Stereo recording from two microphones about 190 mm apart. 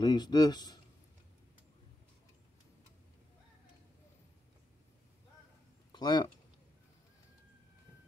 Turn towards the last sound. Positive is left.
turn(degrees=20)  # may be behind; listen again after turning